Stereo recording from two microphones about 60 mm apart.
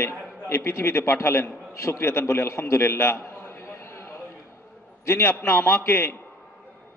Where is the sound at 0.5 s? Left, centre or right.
Left.